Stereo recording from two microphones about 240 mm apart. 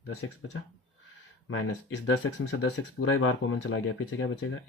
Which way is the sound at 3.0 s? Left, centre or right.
Left.